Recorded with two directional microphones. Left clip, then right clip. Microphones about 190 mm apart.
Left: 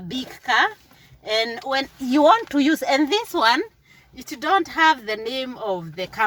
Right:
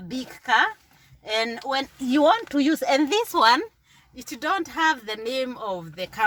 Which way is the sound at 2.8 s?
20° right (ahead or behind).